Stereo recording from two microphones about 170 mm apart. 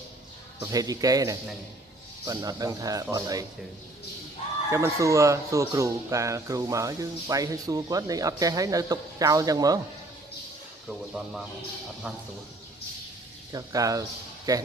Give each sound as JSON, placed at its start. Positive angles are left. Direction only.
{"t": 0.6, "sound": "speech", "side_deg": -20}
{"t": 4.6, "sound": "speech", "side_deg": -15}
{"t": 10.9, "sound": "speech", "side_deg": 0}
{"t": 13.5, "sound": "speech", "side_deg": -20}